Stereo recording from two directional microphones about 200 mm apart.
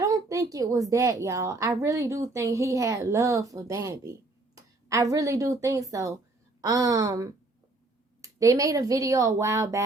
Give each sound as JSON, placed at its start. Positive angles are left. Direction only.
{"t": 0.0, "sound": "a woman's voice", "side_deg": -15}